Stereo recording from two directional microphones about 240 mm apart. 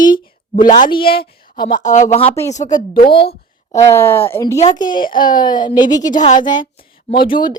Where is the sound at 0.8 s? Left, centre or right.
Left.